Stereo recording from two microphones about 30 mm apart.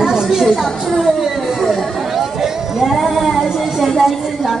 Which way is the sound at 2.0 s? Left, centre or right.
Centre.